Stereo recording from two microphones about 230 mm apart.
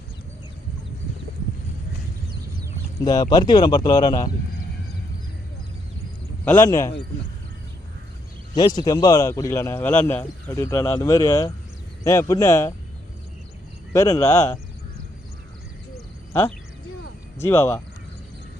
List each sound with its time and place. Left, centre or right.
3.0 s a man's voice: centre
6.4 s a man's voice: centre
8.5 s a man's voice: centre
13.9 s a man's voice: centre
16.3 s a man's voice: centre